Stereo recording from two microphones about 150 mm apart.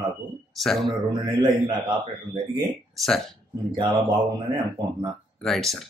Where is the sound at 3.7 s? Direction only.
30° right (ahead or behind).